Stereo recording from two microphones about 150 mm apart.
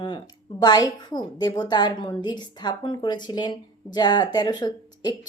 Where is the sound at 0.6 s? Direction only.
30° left (ahead or behind).